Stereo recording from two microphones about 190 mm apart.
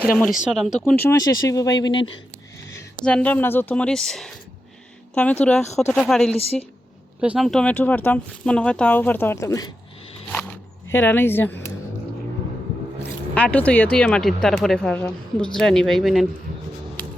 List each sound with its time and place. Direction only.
0.4 s speech: centre (ahead or behind)
0.9 s speech: 15° left (ahead or behind)
3.0 s speech: 5° left (ahead or behind)
6.3 s a woman's voice: 30° left (ahead or behind)
7.2 s speech: 5° right (ahead or behind); by 9.6 s 15° left (ahead or behind)
10.9 s speech: 10° left (ahead or behind)
13.0 s speech: 5° left (ahead or behind)